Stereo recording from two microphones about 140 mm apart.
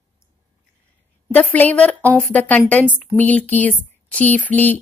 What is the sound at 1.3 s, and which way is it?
Speech, 10° left (ahead or behind).